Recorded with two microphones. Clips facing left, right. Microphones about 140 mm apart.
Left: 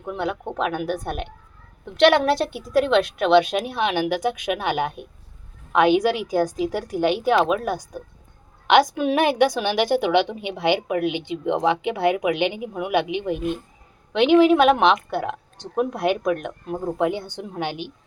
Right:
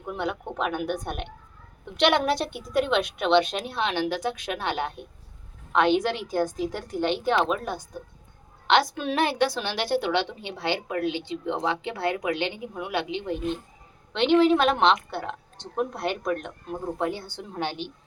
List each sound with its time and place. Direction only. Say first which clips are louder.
0.1 s a woman's voice: left 3 dB; centre (ahead or behind)